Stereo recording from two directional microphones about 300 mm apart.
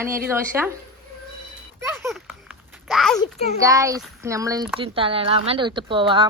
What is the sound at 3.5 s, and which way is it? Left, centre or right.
Speech, centre.